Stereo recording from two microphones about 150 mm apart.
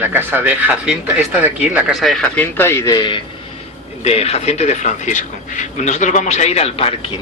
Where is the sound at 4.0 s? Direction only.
45° left (ahead or behind).